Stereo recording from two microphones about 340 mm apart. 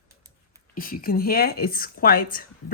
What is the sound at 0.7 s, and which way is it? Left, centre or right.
A woman's voice, left.